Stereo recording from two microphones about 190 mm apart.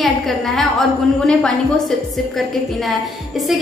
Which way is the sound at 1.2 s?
Centre (ahead or behind).